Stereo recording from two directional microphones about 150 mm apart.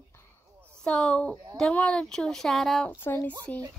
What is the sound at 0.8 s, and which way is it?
A woman's voice, 5° left (ahead or behind).